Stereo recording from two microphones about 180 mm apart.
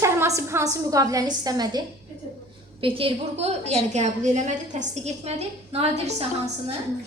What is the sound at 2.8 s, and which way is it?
A woman's voice, 30° right (ahead or behind).